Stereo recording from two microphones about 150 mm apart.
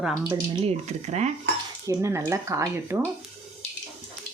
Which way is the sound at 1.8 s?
20° right (ahead or behind).